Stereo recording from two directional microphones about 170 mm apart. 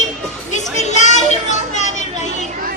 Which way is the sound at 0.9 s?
45° left (ahead or behind).